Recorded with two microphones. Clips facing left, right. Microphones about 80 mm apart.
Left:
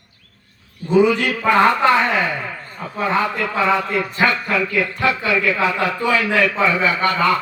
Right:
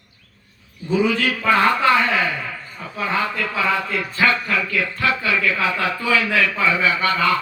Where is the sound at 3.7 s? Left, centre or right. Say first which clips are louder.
Left 3 dB; left.